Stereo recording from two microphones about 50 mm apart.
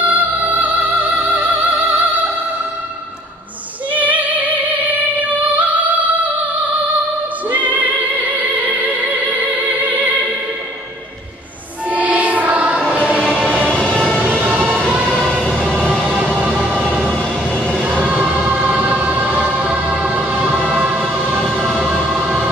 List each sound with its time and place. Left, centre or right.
0.0 s music: right
3.9 s music: right
7.4 s music: right
11.9 s music: right
12.9 s music: left
14.4 s music: right
15.2 s music: left
17.8 s music: right
21.4 s music: centre